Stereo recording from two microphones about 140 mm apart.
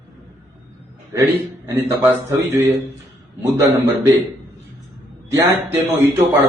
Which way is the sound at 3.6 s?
25° right (ahead or behind).